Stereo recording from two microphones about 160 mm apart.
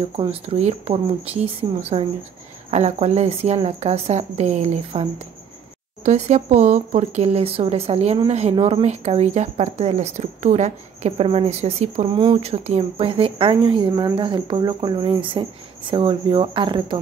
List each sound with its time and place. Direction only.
0.1 s a woman's voice: 40° right (ahead or behind)
6.0 s a woman's voice: 45° right (ahead or behind)